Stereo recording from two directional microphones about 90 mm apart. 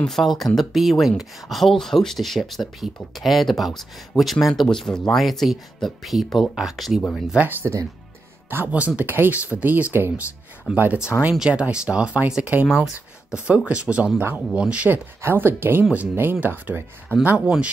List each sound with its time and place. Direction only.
0.0 s speech: centre (ahead or behind)
7.3 s speech: 25° right (ahead or behind)
10.7 s speech: 10° right (ahead or behind)